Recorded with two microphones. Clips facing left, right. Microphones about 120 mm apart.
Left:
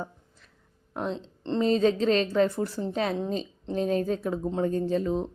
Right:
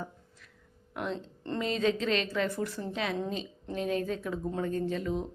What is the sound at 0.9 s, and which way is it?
Speech, 35° left (ahead or behind).